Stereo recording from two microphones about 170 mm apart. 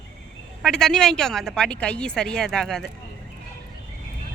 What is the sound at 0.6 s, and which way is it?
A woman's voice, 5° left (ahead or behind).